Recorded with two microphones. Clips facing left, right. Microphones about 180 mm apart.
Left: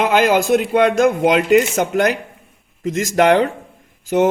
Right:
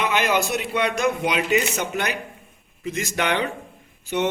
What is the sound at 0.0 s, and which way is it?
A man's voice, 90° left.